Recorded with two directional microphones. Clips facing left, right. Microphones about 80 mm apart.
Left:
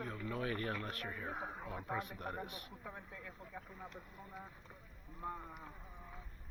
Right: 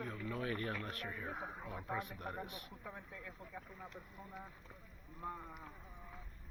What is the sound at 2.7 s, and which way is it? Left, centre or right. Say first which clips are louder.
Speech: left 1 dB; centre.